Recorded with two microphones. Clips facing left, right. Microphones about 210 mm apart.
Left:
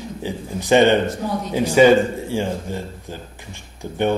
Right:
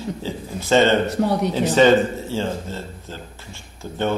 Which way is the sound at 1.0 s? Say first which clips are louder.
Right 4 dB; 70° right (ahead or behind).